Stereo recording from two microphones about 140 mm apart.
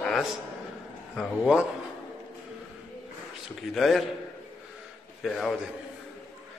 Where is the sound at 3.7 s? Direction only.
Centre (ahead or behind).